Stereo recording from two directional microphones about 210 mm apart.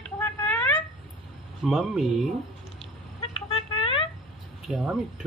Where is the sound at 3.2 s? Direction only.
25° left (ahead or behind).